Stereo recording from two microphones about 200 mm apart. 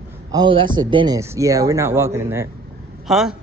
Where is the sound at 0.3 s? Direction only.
25° right (ahead or behind).